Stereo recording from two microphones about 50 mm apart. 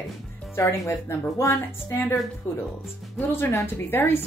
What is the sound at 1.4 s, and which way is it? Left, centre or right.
Speech, left.